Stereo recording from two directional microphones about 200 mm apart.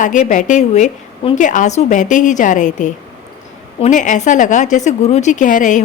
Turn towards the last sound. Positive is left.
turn(degrees=40)  # may be behind; listen again after turning